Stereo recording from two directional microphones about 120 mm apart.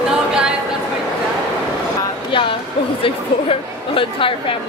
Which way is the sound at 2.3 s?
45° left (ahead or behind).